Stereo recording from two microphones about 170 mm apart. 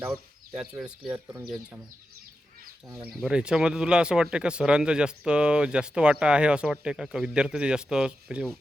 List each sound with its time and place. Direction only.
0.0 s speech: 5° right (ahead or behind)
1.1 s speech: 15° right (ahead or behind)
3.1 s speech: centre (ahead or behind)